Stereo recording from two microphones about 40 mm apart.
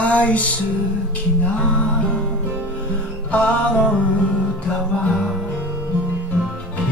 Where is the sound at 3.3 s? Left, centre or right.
Left.